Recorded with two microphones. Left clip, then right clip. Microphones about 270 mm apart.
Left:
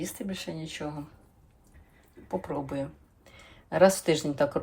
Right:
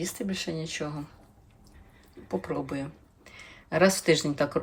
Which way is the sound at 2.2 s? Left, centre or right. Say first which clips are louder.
Right 1 dB; centre.